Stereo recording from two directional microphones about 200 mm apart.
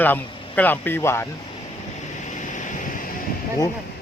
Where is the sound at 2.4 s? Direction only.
40° left (ahead or behind).